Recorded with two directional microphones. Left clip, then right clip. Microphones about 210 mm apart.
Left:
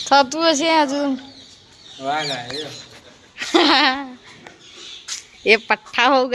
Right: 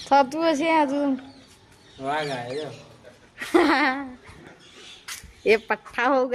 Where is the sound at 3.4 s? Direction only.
Centre (ahead or behind).